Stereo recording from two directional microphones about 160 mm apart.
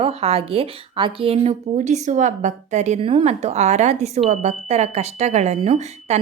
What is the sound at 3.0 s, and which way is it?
Speech, 35° right (ahead or behind).